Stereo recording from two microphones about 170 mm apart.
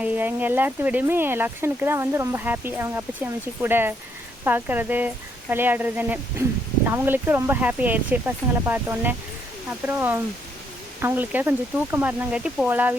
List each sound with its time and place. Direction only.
0.0 s speech: 10° right (ahead or behind)